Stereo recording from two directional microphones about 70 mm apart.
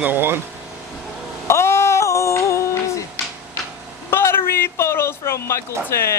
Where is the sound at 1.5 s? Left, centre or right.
Left.